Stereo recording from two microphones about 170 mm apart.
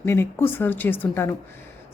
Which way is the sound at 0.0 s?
15° left (ahead or behind).